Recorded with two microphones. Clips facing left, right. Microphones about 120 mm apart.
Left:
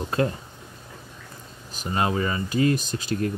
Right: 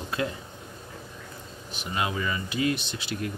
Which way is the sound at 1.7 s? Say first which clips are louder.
Left 5 dB; 40° left (ahead or behind).